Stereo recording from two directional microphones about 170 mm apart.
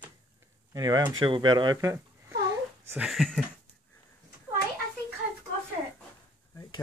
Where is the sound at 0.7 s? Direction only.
20° right (ahead or behind).